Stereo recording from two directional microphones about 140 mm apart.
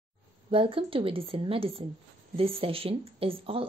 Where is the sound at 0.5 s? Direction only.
40° right (ahead or behind).